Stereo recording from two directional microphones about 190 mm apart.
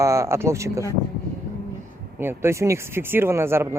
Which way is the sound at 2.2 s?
15° right (ahead or behind).